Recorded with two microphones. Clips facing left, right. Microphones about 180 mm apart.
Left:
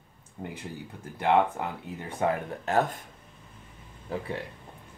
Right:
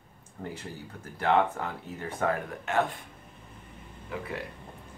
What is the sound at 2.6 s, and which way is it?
Speech, 40° left (ahead or behind).